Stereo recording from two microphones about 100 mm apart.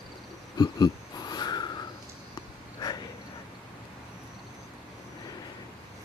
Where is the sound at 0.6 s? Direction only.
40° left (ahead or behind).